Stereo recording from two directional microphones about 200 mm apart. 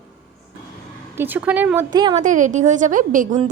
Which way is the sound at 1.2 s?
10° right (ahead or behind).